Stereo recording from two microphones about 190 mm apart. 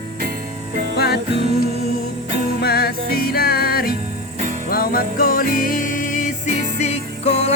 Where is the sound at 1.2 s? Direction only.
30° right (ahead or behind).